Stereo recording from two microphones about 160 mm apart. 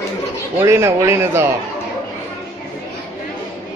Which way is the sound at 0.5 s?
15° right (ahead or behind).